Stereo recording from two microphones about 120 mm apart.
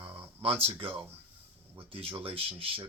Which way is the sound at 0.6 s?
50° right (ahead or behind).